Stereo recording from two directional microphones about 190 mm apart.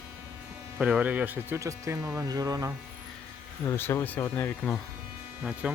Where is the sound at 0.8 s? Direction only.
5° right (ahead or behind).